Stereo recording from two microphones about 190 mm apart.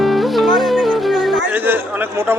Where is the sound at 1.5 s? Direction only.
10° right (ahead or behind).